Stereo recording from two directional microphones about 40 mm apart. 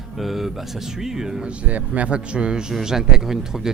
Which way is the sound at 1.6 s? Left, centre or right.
Right.